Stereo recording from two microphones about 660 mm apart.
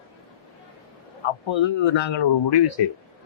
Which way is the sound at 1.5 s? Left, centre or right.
Left.